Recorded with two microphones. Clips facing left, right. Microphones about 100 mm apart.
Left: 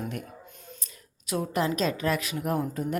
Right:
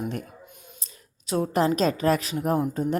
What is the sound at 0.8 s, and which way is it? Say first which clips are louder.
A woman's voice: even; 30° right (ahead or behind).